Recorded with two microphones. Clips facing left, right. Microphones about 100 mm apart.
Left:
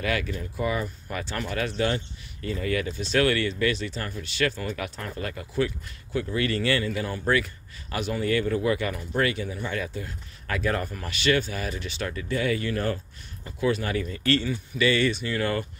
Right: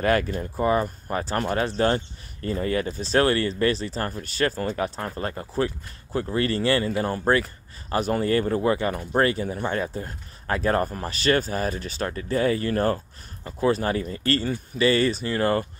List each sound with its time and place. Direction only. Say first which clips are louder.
0.0 s speech: right 6 dB; 45° right (ahead or behind)